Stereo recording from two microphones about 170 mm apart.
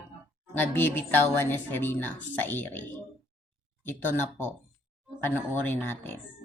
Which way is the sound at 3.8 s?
10° left (ahead or behind).